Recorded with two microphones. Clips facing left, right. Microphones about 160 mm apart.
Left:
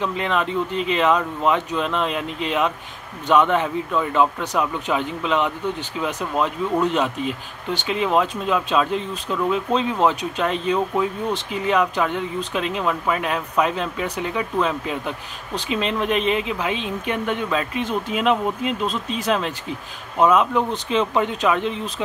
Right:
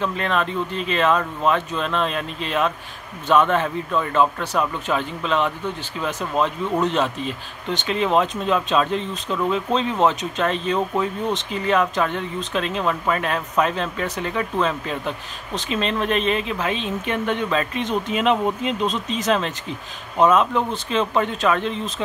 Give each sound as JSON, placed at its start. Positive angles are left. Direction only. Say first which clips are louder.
{"t": 0.0, "sound": "speech", "louder": "even", "side_deg": 15}